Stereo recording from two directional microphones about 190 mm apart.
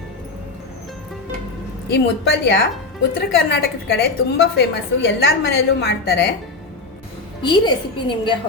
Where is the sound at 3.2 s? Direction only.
55° left (ahead or behind).